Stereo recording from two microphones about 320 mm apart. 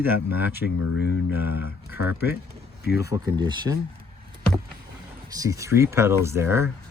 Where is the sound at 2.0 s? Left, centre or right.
Centre.